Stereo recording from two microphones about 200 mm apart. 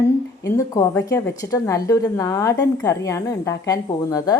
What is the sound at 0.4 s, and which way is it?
A woman's voice, 15° left (ahead or behind).